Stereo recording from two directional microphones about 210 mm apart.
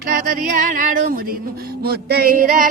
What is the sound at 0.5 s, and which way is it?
Music, 40° right (ahead or behind).